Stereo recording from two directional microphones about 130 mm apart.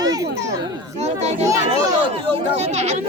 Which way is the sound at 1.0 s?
60° right (ahead or behind).